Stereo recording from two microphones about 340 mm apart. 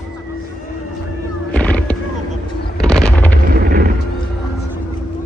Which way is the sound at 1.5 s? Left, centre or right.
Centre.